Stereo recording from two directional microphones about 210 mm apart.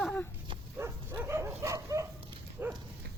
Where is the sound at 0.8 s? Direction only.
10° right (ahead or behind).